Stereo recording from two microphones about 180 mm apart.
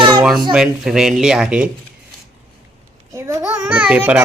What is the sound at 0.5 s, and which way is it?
Speech, 5° right (ahead or behind).